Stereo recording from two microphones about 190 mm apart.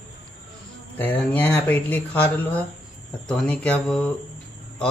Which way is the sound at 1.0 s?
10° left (ahead or behind).